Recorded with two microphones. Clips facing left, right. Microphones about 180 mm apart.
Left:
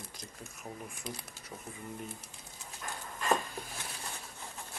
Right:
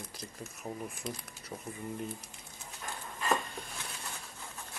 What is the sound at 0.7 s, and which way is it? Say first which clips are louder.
Speech: right 4 dB; 25° right (ahead or behind).